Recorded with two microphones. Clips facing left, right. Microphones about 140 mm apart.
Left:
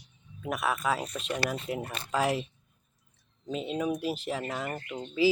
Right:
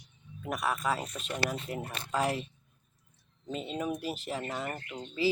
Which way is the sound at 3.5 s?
5° left (ahead or behind).